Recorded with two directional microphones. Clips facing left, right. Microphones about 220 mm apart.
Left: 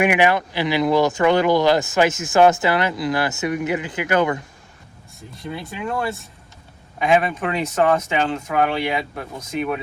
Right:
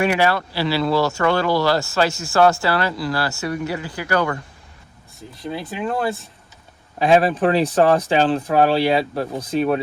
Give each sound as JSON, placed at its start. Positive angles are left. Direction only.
{"t": 0.0, "sound": "speech", "side_deg": 15}
{"t": 5.7, "sound": "speech", "side_deg": -30}